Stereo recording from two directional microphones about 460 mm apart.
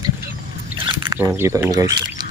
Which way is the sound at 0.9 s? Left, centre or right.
Centre.